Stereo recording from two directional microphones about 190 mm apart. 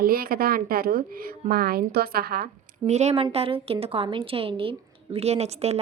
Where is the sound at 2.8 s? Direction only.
35° right (ahead or behind).